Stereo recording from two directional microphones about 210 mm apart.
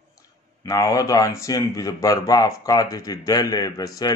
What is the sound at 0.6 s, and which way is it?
Speech, 15° left (ahead or behind).